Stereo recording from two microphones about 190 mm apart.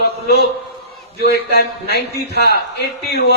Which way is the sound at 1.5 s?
55° left (ahead or behind).